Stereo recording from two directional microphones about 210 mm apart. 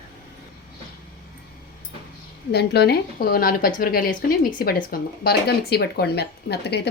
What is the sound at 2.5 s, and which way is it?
A woman's voice, 50° left (ahead or behind).